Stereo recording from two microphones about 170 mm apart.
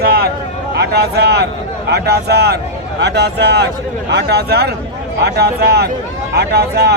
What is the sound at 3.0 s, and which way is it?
Speech, 85° right.